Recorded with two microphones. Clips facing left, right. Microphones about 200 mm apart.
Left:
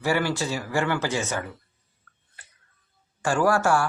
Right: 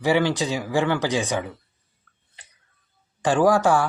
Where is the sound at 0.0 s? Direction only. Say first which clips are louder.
Right 4 dB; 15° right (ahead or behind).